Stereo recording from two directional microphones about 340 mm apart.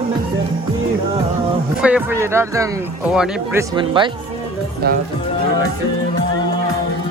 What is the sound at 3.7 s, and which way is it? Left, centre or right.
Speech, centre.